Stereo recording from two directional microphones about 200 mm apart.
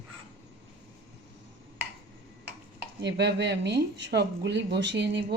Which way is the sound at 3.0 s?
55° right (ahead or behind).